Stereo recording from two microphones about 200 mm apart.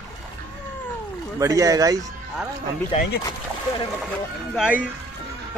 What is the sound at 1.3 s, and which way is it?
Speech, 15° right (ahead or behind).